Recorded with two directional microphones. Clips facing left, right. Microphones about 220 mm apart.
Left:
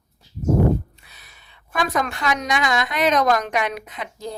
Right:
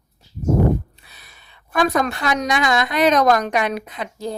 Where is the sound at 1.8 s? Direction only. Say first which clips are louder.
Right 4 dB; 40° right (ahead or behind).